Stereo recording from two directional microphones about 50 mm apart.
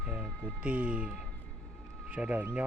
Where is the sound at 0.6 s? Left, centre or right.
Right.